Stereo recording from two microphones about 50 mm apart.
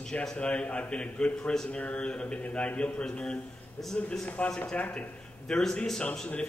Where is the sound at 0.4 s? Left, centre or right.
Left.